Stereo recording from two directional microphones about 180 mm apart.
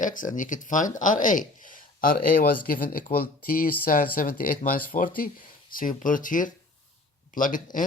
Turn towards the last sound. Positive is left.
turn(degrees=45)  # may be behind; listen again after turning